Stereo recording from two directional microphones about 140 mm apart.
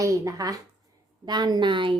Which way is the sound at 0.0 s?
25° right (ahead or behind).